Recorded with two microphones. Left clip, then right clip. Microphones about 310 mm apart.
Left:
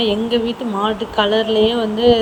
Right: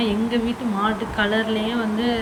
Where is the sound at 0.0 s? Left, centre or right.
Centre.